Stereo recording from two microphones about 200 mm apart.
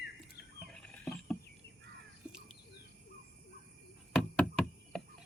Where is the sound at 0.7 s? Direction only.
5° left (ahead or behind).